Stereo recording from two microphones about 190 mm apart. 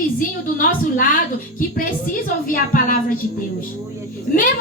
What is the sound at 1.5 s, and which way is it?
Speech, 45° left (ahead or behind).